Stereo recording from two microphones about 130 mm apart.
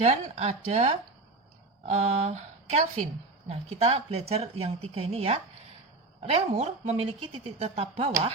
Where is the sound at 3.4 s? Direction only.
55° right (ahead or behind).